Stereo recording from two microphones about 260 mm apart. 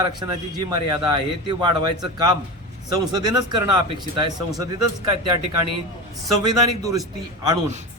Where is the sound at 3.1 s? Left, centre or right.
Centre.